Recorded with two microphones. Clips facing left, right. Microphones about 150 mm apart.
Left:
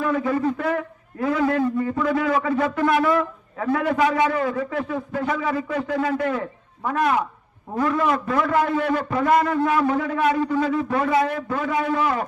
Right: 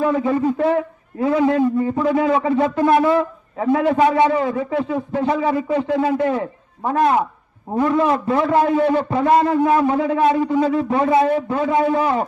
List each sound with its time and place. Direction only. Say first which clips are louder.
0.0 s a man's voice: right 4 dB; 25° right (ahead or behind)